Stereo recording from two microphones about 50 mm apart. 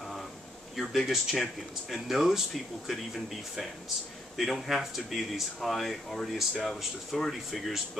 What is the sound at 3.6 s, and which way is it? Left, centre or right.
Speech, centre.